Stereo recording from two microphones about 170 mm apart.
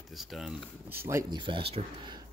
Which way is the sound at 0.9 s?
15° right (ahead or behind).